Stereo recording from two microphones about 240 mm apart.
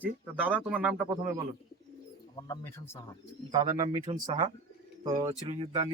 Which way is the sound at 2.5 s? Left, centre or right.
Centre.